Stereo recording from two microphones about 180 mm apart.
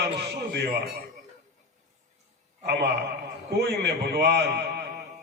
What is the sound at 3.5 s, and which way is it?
A man's voice, 65° right (ahead or behind).